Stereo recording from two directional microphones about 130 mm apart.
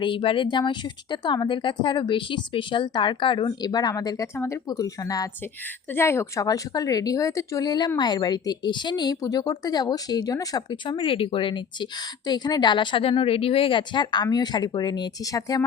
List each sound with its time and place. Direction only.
0.0 s speech: 40° left (ahead or behind)